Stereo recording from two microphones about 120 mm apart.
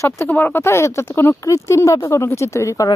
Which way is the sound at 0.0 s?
25° left (ahead or behind).